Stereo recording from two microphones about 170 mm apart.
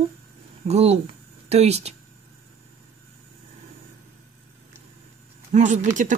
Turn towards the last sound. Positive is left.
turn(degrees=-45)  # may be behind; listen again after turning